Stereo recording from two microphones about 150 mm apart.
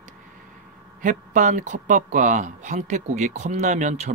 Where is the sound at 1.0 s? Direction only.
55° right (ahead or behind).